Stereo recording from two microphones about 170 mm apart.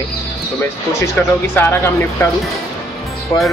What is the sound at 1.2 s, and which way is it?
A man's voice, 10° left (ahead or behind).